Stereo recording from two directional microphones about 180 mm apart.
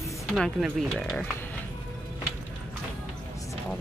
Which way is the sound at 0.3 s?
5° left (ahead or behind).